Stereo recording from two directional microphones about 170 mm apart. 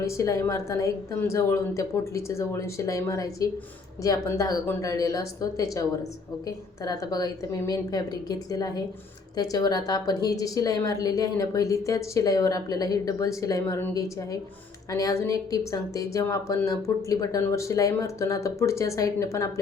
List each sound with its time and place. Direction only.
0.0 s a woman's voice: 15° left (ahead or behind)